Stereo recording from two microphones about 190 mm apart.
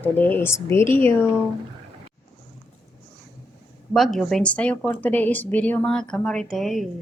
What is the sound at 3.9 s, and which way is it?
Speech, centre (ahead or behind).